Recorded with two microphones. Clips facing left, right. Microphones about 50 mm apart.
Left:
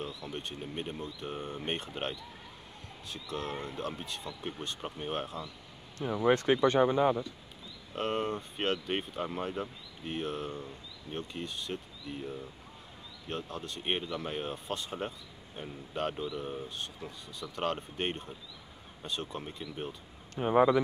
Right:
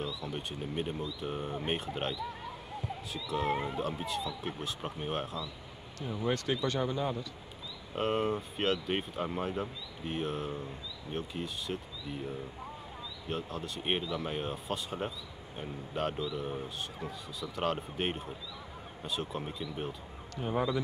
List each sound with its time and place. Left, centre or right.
0.2 s speech: centre
3.3 s speech: centre
6.2 s speech: left
7.9 s speech: centre
20.3 s speech: left